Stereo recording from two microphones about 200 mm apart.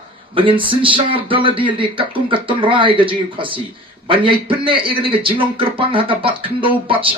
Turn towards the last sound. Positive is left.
turn(degrees=-25)  # may be behind; listen again after turning